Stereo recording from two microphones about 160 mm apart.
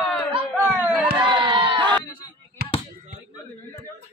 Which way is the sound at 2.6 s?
90° right.